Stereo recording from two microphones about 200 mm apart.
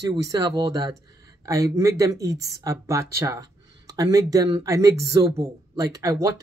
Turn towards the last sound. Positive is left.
turn(degrees=-15)  # may be behind; listen again after turning